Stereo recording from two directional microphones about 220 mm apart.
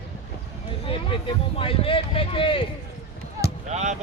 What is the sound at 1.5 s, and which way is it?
Speech, 25° left (ahead or behind).